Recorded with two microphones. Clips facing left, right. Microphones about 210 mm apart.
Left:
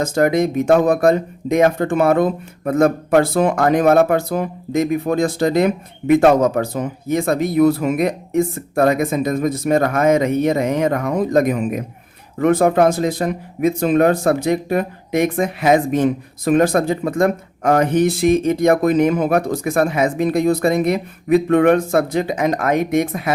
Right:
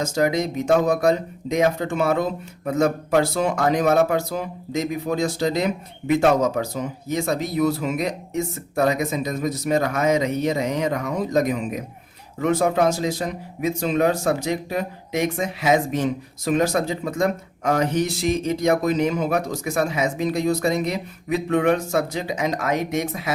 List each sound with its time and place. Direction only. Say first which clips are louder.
0.0 s speech: left 5 dB; 55° left (ahead or behind)